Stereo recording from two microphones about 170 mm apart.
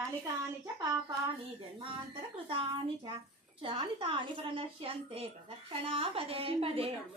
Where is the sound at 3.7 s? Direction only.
30° right (ahead or behind).